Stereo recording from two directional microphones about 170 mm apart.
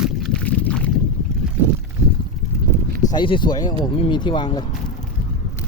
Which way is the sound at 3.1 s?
30° left (ahead or behind).